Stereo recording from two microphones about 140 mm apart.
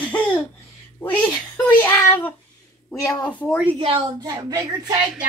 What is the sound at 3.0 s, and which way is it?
Speech, 25° left (ahead or behind).